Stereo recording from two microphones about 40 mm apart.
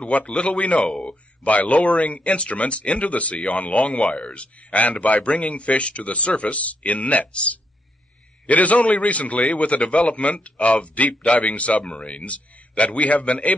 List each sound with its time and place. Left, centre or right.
0.0 s speech: left